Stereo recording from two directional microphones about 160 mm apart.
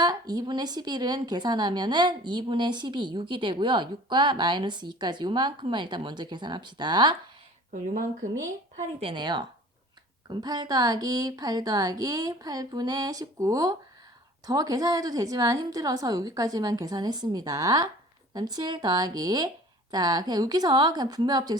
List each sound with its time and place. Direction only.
0.0 s a woman's voice: 25° right (ahead or behind)
7.7 s speech: 55° right (ahead or behind)
8.7 s a woman's voice: 35° right (ahead or behind)